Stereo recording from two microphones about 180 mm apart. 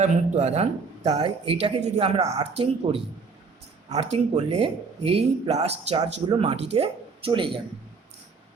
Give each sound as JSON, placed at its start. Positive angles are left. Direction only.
{"t": 0.0, "sound": "speech", "side_deg": -40}